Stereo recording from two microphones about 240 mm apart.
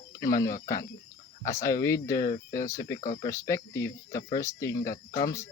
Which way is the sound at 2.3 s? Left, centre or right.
Left.